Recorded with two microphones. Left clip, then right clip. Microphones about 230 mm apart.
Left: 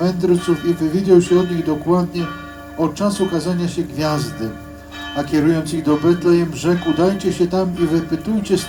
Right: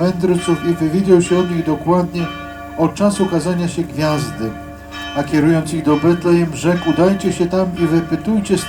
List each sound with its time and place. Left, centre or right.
0.0 s speech: right